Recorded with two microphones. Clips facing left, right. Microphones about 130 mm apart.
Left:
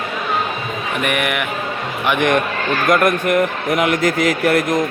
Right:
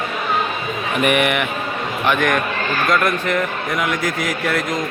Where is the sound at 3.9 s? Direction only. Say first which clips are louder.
Left 5 dB; 65° left (ahead or behind).